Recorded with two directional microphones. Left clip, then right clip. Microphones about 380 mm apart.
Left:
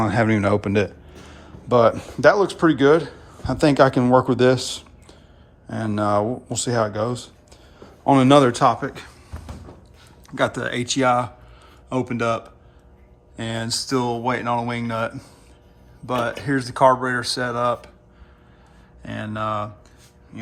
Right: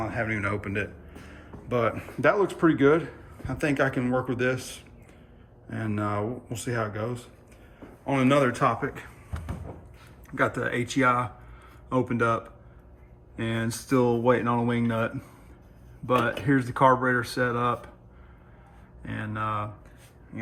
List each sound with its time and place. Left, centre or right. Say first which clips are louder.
0.0 s a man's voice: left 10 dB; left
0.3 s speech: left 9 dB; centre
1.3 s a sound: left 10 dB; centre
2.2 s speech: left 7 dB; centre
10.2 s speech: left 4 dB; centre
19.0 s speech: left 5 dB; centre